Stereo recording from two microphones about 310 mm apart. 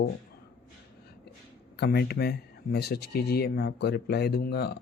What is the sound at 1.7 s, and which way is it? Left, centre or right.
Speech, left.